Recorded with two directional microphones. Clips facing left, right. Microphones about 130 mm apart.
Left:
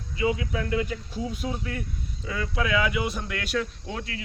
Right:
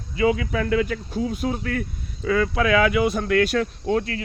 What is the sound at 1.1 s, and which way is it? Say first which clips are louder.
Speech: right 7 dB; 55° right (ahead or behind).